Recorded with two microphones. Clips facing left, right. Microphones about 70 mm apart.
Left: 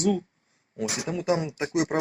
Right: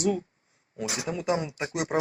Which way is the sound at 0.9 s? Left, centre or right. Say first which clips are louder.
Left 2 dB; right.